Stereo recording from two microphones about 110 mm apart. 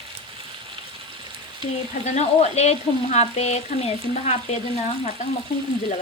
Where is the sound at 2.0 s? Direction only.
85° left.